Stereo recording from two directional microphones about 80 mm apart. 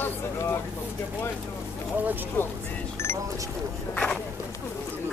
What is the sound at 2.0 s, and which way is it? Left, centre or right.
Speech, right.